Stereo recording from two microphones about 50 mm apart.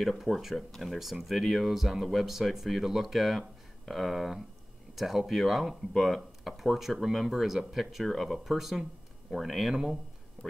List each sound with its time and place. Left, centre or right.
0.0 s speech: centre
0.6 s speech: centre
10.4 s a sound: centre